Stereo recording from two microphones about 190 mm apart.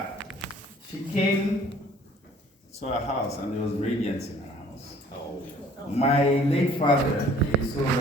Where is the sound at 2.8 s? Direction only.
35° left (ahead or behind).